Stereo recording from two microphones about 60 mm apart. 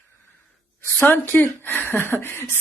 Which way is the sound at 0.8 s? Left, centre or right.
Left.